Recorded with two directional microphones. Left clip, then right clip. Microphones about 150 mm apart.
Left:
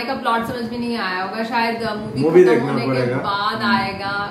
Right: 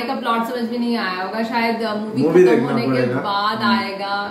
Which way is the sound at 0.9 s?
Centre (ahead or behind).